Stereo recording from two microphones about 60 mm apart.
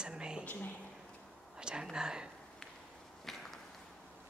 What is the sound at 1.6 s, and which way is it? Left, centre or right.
Speech, centre.